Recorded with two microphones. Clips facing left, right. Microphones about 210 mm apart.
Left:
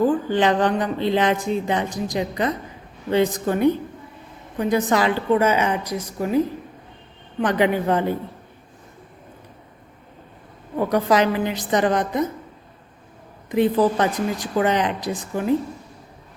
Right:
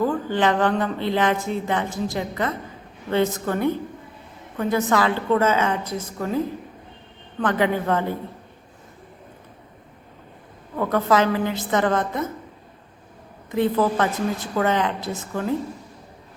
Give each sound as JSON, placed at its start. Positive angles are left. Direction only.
{"t": 0.0, "sound": "a woman's voice", "side_deg": 20}
{"t": 7.4, "sound": "a woman's voice", "side_deg": 20}
{"t": 10.8, "sound": "a woman's voice", "side_deg": 15}
{"t": 13.5, "sound": "a woman's voice", "side_deg": 20}